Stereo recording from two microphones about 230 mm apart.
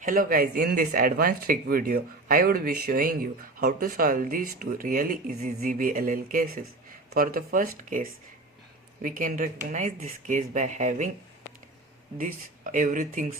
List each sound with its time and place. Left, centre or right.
0.0 s speech: right
12.7 s speech: right